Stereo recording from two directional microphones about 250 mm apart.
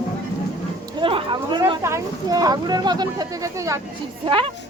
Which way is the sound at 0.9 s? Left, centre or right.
Centre.